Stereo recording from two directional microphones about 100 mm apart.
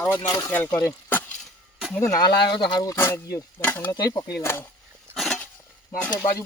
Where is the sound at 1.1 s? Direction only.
20° left (ahead or behind).